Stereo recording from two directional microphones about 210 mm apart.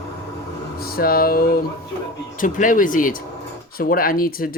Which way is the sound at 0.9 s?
45° left (ahead or behind).